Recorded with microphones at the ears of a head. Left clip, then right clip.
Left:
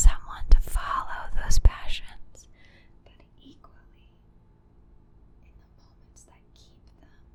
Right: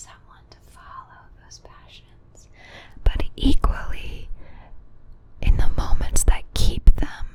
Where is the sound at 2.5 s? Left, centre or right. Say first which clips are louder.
Right 14 dB; right.